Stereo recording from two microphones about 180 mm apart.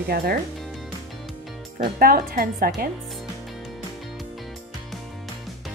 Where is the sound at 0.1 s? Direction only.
55° right (ahead or behind).